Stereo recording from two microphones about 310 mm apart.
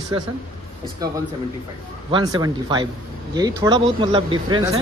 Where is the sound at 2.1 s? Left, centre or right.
Centre.